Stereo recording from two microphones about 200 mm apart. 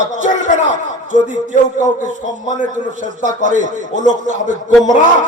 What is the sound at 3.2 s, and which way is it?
A man's voice, 40° right (ahead or behind).